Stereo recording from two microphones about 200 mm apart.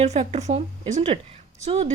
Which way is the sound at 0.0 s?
35° right (ahead or behind).